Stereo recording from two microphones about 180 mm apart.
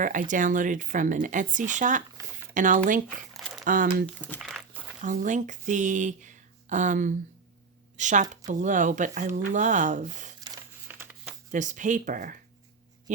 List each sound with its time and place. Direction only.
0.0 s speech: 45° right (ahead or behind)
3.3 s a sound: centre (ahead or behind)
3.6 s speech: 50° right (ahead or behind)
4.0 s speech: 10° left (ahead or behind)
4.4 s dog: centre (ahead or behind)
5.0 s speech: 45° right (ahead or behind)
10.4 s crumpling: 10° right (ahead or behind)
11.5 s speech: 45° right (ahead or behind)